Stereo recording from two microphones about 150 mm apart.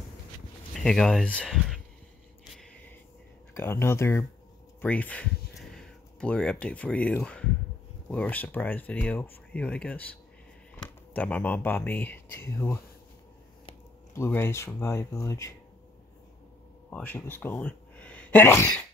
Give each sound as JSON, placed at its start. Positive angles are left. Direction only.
{"t": 0.7, "sound": "speech", "side_deg": 5}
{"t": 3.5, "sound": "speech", "side_deg": 15}
{"t": 11.1, "sound": "speech", "side_deg": 10}
{"t": 14.1, "sound": "speech", "side_deg": 15}
{"t": 16.9, "sound": "speech", "side_deg": 10}